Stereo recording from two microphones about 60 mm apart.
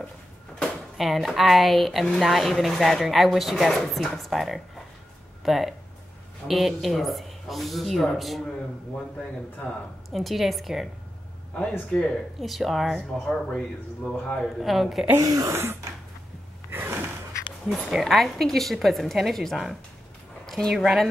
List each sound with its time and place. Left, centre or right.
0.9 s a woman's voice: centre
10.1 s a woman's voice: centre
11.9 s speech: centre
12.4 s a woman's voice: centre
13.2 s a man's voice: centre
14.6 s a woman's voice: centre
15.1 s speech: right
15.5 s a sound: right
16.7 s gasp: right
17.9 s a woman's voice: centre